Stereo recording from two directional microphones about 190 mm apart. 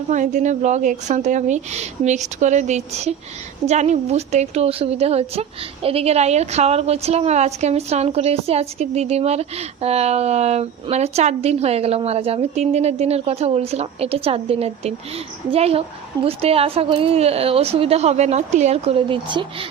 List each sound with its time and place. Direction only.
0.1 s a woman's voice: 40° right (ahead or behind)